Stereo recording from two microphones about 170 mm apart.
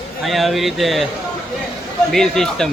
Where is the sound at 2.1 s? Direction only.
5° left (ahead or behind).